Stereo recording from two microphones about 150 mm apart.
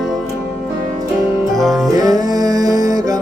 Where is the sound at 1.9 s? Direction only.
25° right (ahead or behind).